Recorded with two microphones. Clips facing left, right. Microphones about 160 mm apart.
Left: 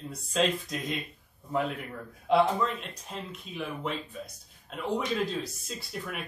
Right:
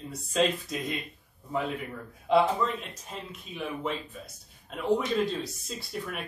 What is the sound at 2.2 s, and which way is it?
Speech, centre (ahead or behind).